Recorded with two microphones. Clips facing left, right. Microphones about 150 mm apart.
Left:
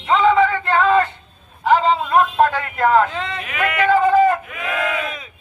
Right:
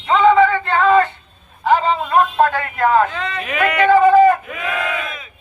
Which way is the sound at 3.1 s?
25° left (ahead or behind).